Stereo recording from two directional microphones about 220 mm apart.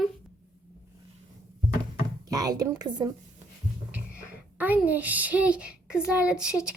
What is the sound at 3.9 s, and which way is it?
A child's voice, 5° right (ahead or behind).